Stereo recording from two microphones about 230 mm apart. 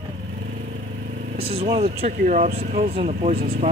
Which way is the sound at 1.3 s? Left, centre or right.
Right.